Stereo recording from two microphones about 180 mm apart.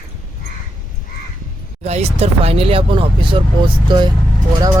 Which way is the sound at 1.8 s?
35° right (ahead or behind).